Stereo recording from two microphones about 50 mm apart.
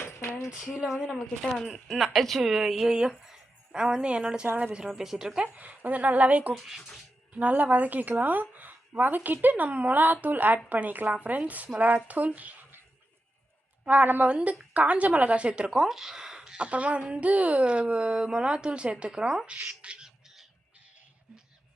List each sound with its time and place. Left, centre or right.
0.0 s a sound: left
0.6 s speech: centre
1.4 s speech: centre
4.9 s speech: centre
5.5 s speech: right
6.5 s speech: centre
7.3 s speech: right
13.8 s speech: right; by 16.6 s centre
16.6 s speech: right
20.1 s bird: centre